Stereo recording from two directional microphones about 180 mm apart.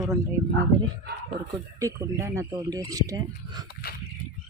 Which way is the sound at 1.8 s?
15° right (ahead or behind).